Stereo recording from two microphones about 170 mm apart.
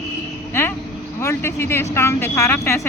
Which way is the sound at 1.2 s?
15° left (ahead or behind).